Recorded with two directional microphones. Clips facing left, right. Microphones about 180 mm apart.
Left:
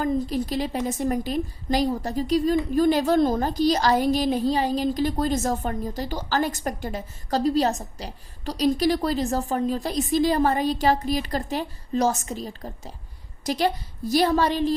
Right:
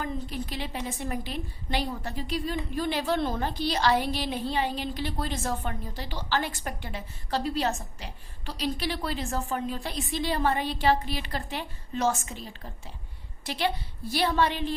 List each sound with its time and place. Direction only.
0.0 s a woman's voice: 40° left (ahead or behind)